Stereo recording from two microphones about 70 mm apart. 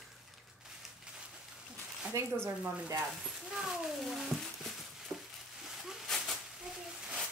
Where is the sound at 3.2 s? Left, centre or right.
Centre.